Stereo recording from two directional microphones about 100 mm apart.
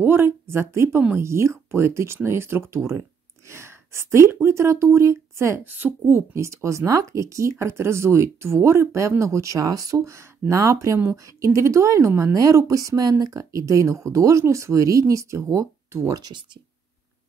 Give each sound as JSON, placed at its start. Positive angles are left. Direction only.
{"t": 0.0, "sound": "speech", "side_deg": -20}
{"t": 16.2, "sound": "speech", "side_deg": -45}